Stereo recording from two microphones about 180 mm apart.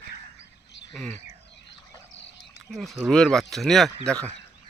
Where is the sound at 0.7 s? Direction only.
75° left (ahead or behind).